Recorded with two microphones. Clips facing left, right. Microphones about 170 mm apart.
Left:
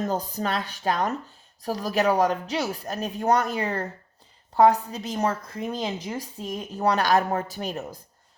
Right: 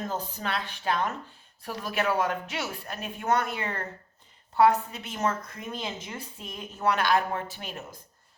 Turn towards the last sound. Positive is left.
turn(degrees=40)  # may be behind; listen again after turning